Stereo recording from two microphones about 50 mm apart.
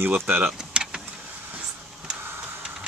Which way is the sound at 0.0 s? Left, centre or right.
Right.